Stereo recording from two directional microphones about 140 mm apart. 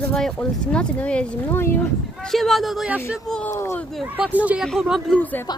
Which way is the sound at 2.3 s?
Centre (ahead or behind).